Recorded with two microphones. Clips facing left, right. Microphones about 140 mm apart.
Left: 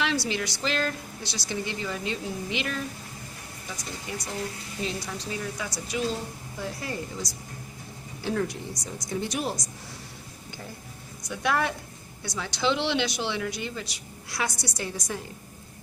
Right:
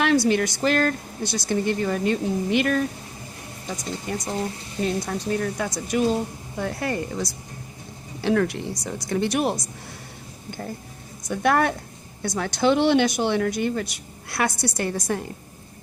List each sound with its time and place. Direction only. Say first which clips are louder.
0.3 s speech: right 9 dB; 50° right (ahead or behind)
11.2 s a woman's voice: right 6 dB; 50° right (ahead or behind)